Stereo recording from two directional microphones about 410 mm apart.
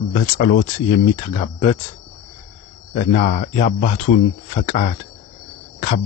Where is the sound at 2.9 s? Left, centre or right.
Centre.